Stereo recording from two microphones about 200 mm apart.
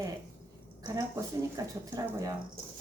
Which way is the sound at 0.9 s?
15° right (ahead or behind).